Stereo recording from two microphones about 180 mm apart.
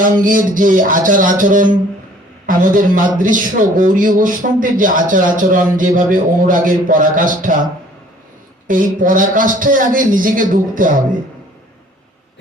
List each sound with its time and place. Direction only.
0.0 s speech: 50° right (ahead or behind)
8.6 s speech: 50° right (ahead or behind)